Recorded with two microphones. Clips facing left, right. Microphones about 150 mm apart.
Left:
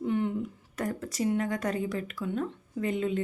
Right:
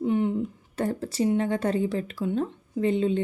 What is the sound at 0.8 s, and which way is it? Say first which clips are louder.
A woman's voice: right 5 dB; 30° right (ahead or behind).